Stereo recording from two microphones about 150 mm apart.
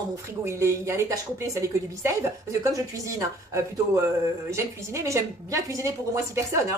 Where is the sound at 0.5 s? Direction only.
20° right (ahead or behind).